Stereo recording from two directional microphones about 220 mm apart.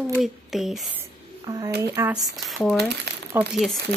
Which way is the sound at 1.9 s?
5° right (ahead or behind).